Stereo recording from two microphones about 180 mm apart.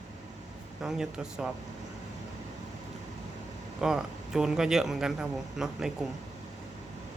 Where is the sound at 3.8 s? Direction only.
5° right (ahead or behind).